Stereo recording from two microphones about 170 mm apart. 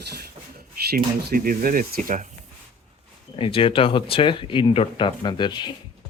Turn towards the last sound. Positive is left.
turn(degrees=25)  # may be behind; listen again after turning